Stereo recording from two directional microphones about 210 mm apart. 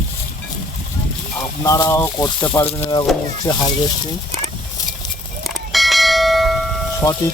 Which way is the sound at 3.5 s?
20° left (ahead or behind).